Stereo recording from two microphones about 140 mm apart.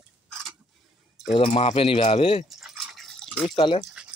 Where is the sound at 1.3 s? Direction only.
45° left (ahead or behind).